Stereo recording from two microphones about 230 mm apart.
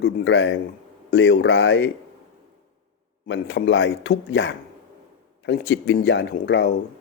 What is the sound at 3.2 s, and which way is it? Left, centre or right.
A man's voice, left.